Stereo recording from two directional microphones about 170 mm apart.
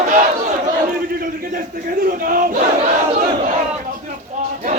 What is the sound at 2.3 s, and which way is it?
Battle cry, 50° right (ahead or behind).